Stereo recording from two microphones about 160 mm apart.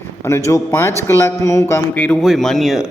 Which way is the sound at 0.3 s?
15° left (ahead or behind).